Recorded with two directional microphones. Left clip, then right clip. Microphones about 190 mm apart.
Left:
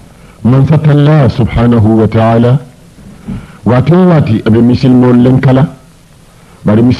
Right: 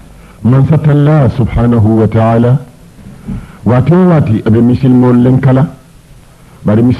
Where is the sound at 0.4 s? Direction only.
30° right (ahead or behind).